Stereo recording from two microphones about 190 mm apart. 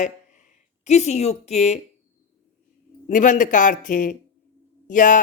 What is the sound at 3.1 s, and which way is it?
Speech, 45° left (ahead or behind).